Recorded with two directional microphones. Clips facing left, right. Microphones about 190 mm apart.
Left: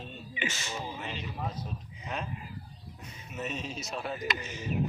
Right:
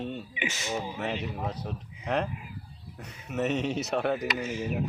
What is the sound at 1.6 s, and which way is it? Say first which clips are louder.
Speech: right 3 dB; 75° right (ahead or behind).